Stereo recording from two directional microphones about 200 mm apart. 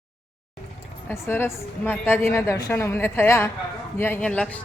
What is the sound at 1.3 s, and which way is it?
A woman's voice, 10° left (ahead or behind).